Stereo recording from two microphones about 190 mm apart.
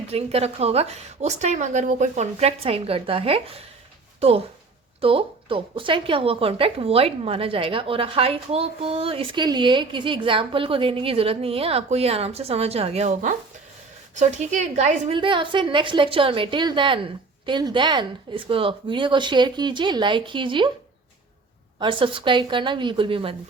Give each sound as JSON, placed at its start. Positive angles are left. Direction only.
{"t": 0.1, "sound": "a woman's voice", "side_deg": -30}
{"t": 15.1, "sound": "a woman's voice", "side_deg": -25}
{"t": 21.8, "sound": "a woman's voice", "side_deg": -25}